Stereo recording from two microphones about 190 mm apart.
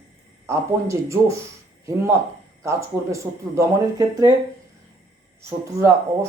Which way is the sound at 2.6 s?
15° right (ahead or behind).